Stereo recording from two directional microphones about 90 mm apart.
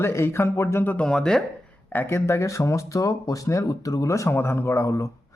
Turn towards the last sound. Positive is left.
turn(degrees=35)  # may be behind; listen again after turning